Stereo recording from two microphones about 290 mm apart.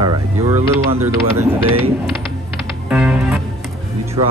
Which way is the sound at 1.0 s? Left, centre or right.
Centre.